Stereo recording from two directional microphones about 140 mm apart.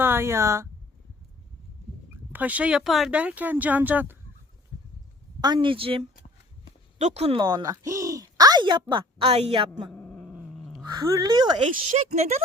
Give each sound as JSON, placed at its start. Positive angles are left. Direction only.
{"t": 0.0, "sound": "speech", "side_deg": -15}
{"t": 2.3, "sound": "speech", "side_deg": -10}
{"t": 5.5, "sound": "speech", "side_deg": -40}
{"t": 7.0, "sound": "speech", "side_deg": -50}
{"t": 7.4, "sound": "speech", "side_deg": -25}
{"t": 9.9, "sound": "growling", "side_deg": 10}
{"t": 10.8, "sound": "speech", "side_deg": -25}
{"t": 11.8, "sound": "speech", "side_deg": -50}